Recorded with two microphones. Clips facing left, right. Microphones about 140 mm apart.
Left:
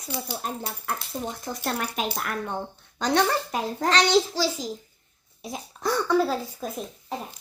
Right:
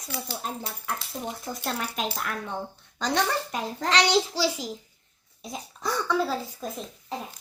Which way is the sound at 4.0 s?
10° right (ahead or behind).